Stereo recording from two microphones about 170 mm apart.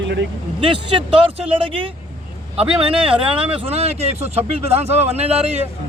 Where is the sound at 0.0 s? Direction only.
90° right.